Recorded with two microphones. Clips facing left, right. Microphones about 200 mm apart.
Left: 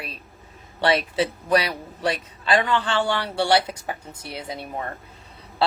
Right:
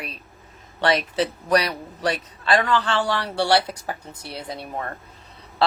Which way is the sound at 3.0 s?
25° left (ahead or behind).